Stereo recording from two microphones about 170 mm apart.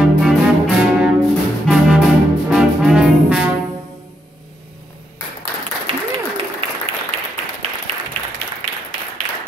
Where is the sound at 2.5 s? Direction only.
Centre (ahead or behind).